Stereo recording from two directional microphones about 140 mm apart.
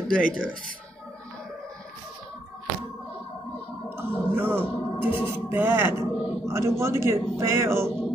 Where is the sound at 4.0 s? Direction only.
15° right (ahead or behind).